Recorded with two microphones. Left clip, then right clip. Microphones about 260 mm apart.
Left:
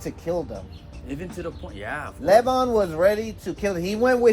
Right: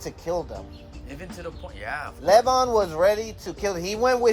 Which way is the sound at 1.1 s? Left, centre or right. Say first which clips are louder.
Left 4 dB; centre.